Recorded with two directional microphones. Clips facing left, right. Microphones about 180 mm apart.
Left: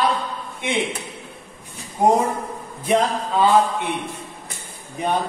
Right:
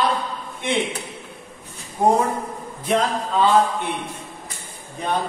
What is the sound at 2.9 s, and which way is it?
Speech, 10° left (ahead or behind).